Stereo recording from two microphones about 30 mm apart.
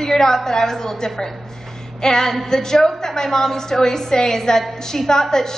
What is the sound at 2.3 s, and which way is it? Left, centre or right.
A woman's voice, centre.